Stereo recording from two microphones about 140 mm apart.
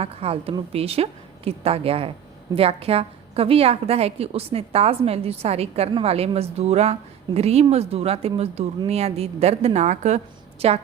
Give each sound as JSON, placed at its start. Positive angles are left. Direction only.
{"t": 0.0, "sound": "a woman's voice", "side_deg": -45}
{"t": 10.6, "sound": "a woman's voice", "side_deg": -45}